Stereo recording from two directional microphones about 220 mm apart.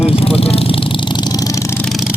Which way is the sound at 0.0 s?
25° left (ahead or behind).